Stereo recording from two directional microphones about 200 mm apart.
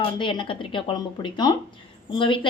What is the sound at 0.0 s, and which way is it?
A woman's voice, 25° left (ahead or behind).